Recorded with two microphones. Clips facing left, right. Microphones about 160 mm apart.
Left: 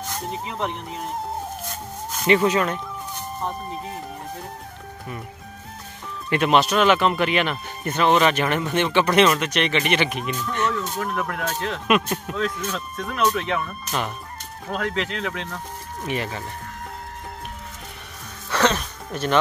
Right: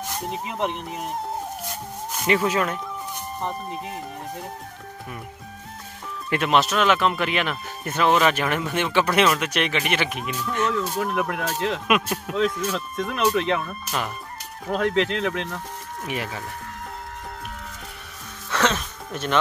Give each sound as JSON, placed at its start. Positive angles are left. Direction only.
{"t": 0.1, "sound": "speech", "side_deg": -15}
{"t": 6.3, "sound": "speech", "side_deg": 0}
{"t": 11.1, "sound": "speech", "side_deg": -15}
{"t": 11.9, "sound": "speech", "side_deg": -5}
{"t": 14.7, "sound": "speech", "side_deg": -25}
{"t": 16.1, "sound": "speech", "side_deg": -5}
{"t": 18.5, "sound": "music", "side_deg": 0}